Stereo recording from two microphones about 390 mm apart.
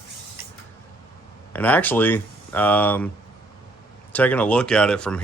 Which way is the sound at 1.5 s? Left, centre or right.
Centre.